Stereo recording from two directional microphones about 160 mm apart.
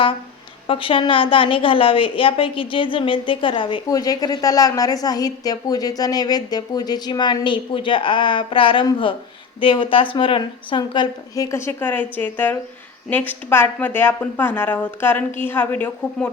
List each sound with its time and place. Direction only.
0.7 s a woman's voice: 35° left (ahead or behind); by 16.3 s 10° left (ahead or behind)